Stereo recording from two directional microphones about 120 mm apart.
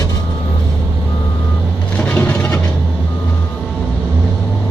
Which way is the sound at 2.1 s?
15° left (ahead or behind).